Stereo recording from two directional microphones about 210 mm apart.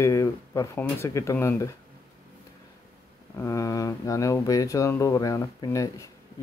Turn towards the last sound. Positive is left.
turn(degrees=15)  # may be behind; listen again after turning